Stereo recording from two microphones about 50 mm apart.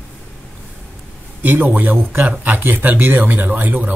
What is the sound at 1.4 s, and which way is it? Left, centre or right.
Speech, right.